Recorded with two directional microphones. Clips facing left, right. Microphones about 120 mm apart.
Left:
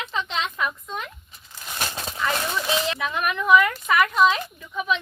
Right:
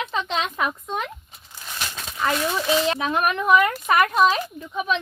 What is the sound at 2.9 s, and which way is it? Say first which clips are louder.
Speech: right 4 dB; 40° right (ahead or behind).